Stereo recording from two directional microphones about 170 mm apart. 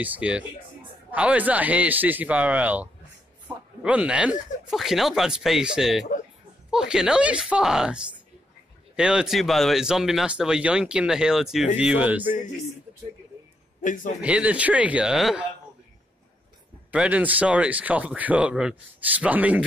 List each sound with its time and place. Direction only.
0.0 s speech: 10° right (ahead or behind)
13.7 s a man's voice: 50° left (ahead or behind)
14.2 s speech: 10° right (ahead or behind)
16.9 s speech: 5° right (ahead or behind)